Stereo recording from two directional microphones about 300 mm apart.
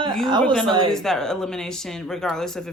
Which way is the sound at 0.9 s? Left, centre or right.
Centre.